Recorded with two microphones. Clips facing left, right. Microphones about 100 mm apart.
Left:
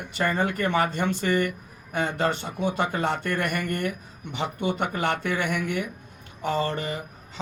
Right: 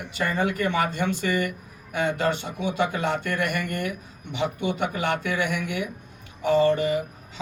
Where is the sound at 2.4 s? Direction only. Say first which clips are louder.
Even; 45° left (ahead or behind).